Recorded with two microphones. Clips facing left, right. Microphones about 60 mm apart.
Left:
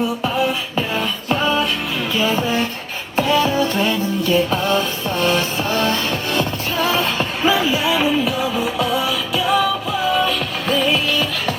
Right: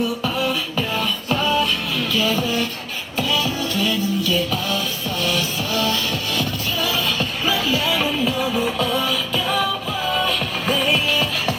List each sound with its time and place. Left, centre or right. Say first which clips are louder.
0.3 s music: left 3 dB; centre